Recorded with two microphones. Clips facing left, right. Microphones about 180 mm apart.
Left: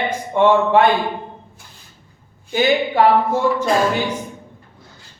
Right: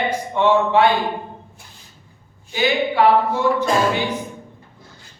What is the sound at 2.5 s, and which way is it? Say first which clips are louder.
Speech: left 3 dB; 45° left (ahead or behind).